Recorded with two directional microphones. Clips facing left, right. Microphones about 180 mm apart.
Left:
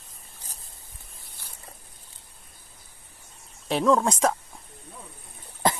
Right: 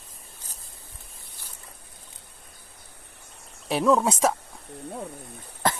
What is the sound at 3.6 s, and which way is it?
Speech, 5° right (ahead or behind).